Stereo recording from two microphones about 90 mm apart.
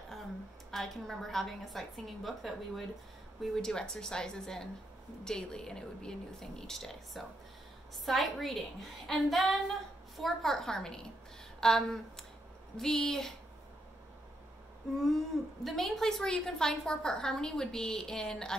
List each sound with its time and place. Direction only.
0.7 s a woman's voice: centre (ahead or behind)
15.0 s a woman's voice: centre (ahead or behind)